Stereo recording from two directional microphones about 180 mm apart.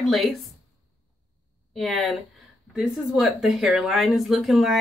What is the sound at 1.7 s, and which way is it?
Speech, centre (ahead or behind).